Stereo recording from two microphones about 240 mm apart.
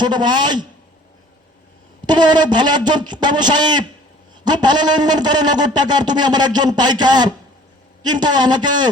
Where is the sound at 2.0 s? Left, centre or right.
Centre.